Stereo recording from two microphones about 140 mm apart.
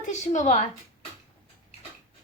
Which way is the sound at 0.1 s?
55° left (ahead or behind).